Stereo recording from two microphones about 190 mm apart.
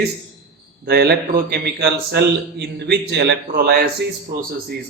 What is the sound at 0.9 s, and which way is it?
A man's voice, 55° right (ahead or behind).